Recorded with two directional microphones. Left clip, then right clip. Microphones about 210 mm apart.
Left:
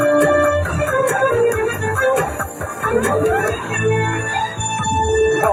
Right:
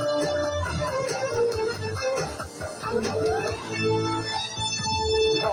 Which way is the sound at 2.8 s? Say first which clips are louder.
Left 9 dB; 30° left (ahead or behind).